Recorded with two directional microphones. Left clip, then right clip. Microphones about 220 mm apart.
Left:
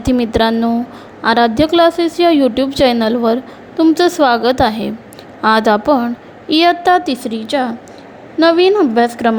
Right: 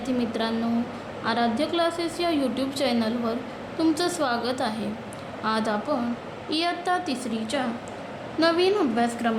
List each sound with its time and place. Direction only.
0.0 s a woman's voice: 40° left (ahead or behind)